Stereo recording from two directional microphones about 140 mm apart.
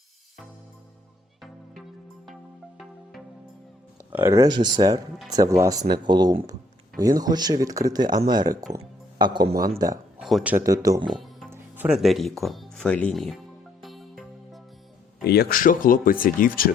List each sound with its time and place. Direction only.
4.1 s a man's voice: 20° right (ahead or behind)
10.2 s speech: centre (ahead or behind)
10.4 s speech: 15° right (ahead or behind)
10.7 s speech: 25° right (ahead or behind)
11.2 s music: centre (ahead or behind)
11.5 s music: 15° right (ahead or behind)
11.9 s speech: centre (ahead or behind)
15.4 s speech: 80° left